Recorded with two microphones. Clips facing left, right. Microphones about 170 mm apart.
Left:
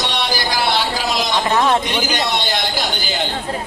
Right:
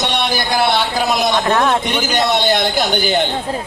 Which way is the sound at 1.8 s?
55° right (ahead or behind).